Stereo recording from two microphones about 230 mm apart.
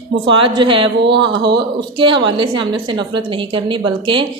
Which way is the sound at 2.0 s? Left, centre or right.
Right.